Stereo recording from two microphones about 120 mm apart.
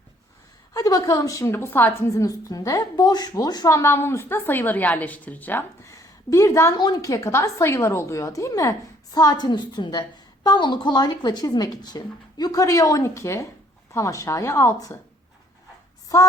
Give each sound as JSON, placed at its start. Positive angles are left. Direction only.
{"t": 0.7, "sound": "a woman's voice", "side_deg": 30}
{"t": 16.1, "sound": "a woman's voice", "side_deg": 25}